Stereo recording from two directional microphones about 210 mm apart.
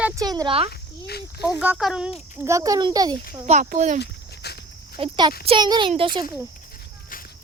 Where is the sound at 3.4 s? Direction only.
35° right (ahead or behind).